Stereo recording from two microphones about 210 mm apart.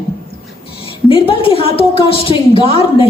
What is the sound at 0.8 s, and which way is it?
A woman's voice, 25° left (ahead or behind).